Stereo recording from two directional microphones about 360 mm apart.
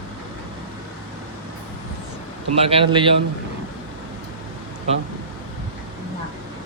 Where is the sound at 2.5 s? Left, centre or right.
Centre.